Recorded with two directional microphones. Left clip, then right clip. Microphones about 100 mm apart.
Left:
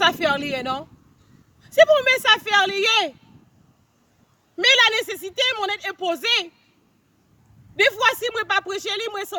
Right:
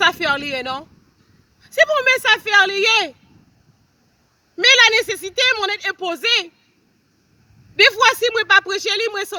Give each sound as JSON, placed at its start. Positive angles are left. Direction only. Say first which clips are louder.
{"t": 0.0, "sound": "a woman's voice", "louder": "right 2 dB", "side_deg": 45}
{"t": 4.6, "sound": "a woman's voice", "louder": "right 4 dB", "side_deg": 45}
{"t": 7.8, "sound": "a woman's voice", "louder": "right 5 dB", "side_deg": 45}